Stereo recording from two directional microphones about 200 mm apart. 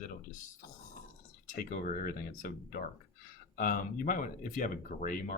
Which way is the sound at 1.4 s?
40° left (ahead or behind).